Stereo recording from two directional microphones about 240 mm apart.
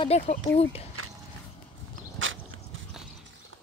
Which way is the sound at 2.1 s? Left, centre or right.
Right.